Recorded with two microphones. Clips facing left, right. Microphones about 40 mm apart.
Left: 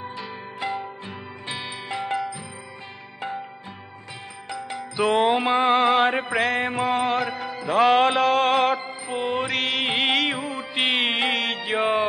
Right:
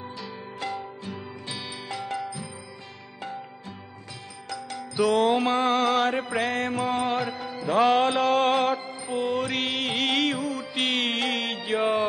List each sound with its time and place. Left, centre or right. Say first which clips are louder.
0.0 s music: left 3 dB; left
4.5 s music: left 3 dB; left
6.3 s mantra: left 4 dB; centre
6.6 s mantra: left 3 dB; left
7.1 s music: left 3 dB; centre
9.1 s music: left 1 dB; left
9.5 s music: left 3 dB; centre
9.8 s music: left 3 dB; left
11.3 s mantra: left 3 dB; centre